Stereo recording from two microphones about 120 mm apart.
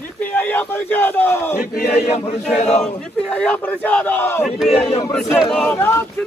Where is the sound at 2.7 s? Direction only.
5° left (ahead or behind).